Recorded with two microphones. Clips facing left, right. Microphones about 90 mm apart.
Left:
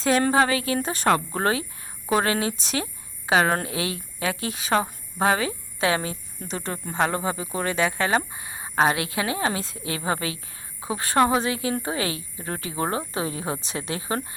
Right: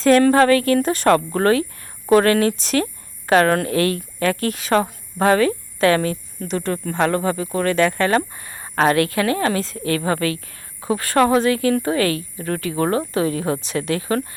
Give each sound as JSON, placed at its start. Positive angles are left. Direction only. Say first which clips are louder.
{"t": 0.0, "sound": "speech", "louder": "right 7 dB", "side_deg": 10}